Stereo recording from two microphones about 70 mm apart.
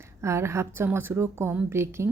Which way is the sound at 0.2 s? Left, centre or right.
Right.